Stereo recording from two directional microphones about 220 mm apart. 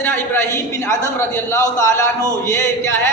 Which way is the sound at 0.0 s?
10° left (ahead or behind).